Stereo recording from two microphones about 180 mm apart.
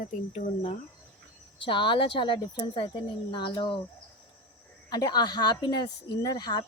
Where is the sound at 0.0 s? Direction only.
45° left (ahead or behind).